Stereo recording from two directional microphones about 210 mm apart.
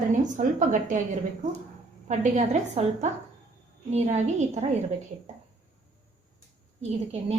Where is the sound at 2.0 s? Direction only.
35° right (ahead or behind).